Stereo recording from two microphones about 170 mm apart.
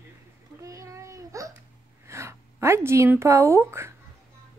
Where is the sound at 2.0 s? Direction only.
15° right (ahead or behind).